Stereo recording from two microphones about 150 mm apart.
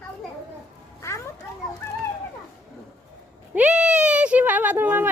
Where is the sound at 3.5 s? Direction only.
10° right (ahead or behind).